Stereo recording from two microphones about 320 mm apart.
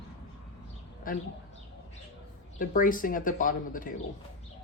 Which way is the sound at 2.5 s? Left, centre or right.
Left.